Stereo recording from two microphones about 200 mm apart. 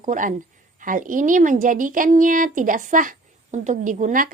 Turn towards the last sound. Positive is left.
turn(degrees=-40)  # may be behind; listen again after turning